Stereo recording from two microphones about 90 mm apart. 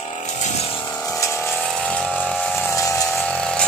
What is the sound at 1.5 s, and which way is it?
Pump, centre (ahead or behind).